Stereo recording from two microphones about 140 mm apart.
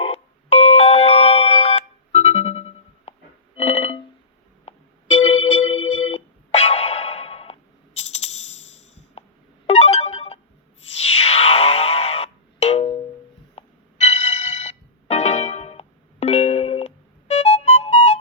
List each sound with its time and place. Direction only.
0.0 s a sound: 45° left (ahead or behind)
3.6 s music: 45° left (ahead or behind)
4.6 s keyboard: 50° left (ahead or behind)
9.6 s music: 50° left (ahead or behind)